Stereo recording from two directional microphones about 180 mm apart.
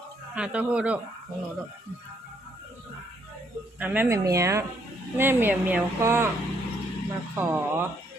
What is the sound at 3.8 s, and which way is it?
Speech, 10° right (ahead or behind).